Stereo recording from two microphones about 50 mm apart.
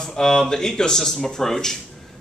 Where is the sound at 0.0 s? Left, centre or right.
Centre.